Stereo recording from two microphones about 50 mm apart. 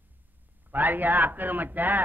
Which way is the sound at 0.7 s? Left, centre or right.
Right.